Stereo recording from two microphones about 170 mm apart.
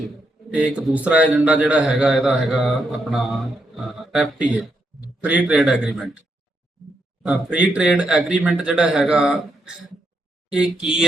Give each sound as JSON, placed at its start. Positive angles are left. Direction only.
{"t": 0.5, "sound": "speech", "side_deg": -5}
{"t": 7.2, "sound": "speech", "side_deg": -10}